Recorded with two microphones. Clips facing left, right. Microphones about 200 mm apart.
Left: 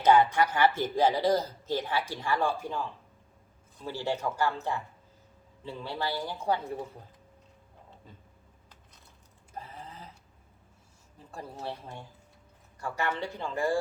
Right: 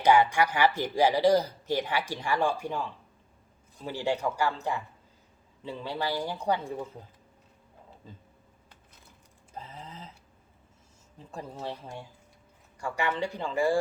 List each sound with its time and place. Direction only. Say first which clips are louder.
0.0 s speech: even; 10° right (ahead or behind)
3.8 s speech: right 2 dB; 15° right (ahead or behind)
11.3 s speech: right 1 dB; 15° right (ahead or behind)